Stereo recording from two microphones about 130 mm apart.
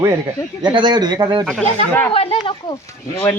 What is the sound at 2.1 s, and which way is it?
Speech, 50° left (ahead or behind).